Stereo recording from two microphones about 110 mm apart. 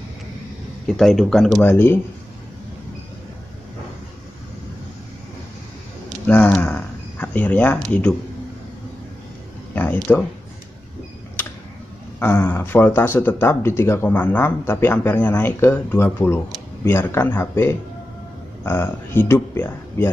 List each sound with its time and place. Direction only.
0.8 s speech: centre (ahead or behind)
1.6 s speech: 20° left (ahead or behind)
6.2 s a sound: 15° left (ahead or behind)
10.1 s speech: 15° left (ahead or behind)
12.2 s speech: 20° left (ahead or behind)